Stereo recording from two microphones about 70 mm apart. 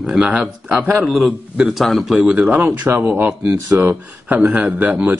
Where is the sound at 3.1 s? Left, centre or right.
Right.